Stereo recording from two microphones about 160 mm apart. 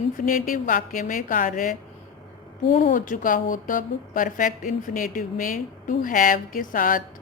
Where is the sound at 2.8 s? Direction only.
55° left (ahead or behind).